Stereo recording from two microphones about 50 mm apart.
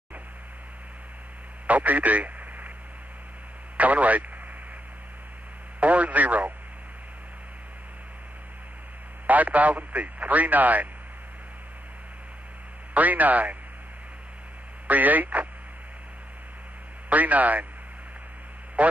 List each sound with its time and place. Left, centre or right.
1.7 s a man's voice: right
3.7 s speech: right
5.8 s speech: right
9.3 s speech: right
12.9 s speech: right
14.9 s speech: right
17.1 s speech: right
18.8 s a man's voice: right